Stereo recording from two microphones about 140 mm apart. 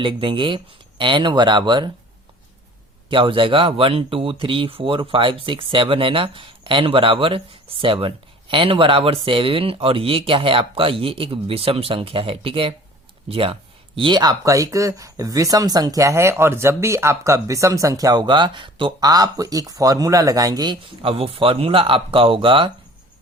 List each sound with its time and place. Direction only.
0.0 s speech: 35° right (ahead or behind)
3.1 s speech: 35° right (ahead or behind)